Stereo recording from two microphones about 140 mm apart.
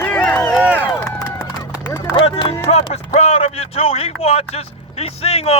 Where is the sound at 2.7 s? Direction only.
50° left (ahead or behind).